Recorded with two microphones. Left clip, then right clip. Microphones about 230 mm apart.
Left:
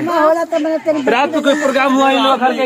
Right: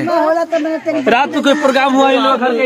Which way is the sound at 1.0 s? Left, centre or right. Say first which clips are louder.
Right 3 dB; right.